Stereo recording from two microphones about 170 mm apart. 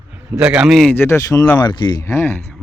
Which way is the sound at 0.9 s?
15° left (ahead or behind).